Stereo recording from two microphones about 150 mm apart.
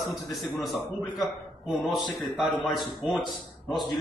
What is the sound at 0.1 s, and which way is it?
Speech, centre (ahead or behind).